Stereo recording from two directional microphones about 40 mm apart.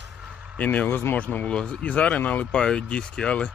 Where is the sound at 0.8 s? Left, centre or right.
Left.